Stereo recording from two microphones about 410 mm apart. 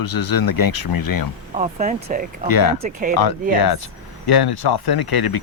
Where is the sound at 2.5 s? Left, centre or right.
Left.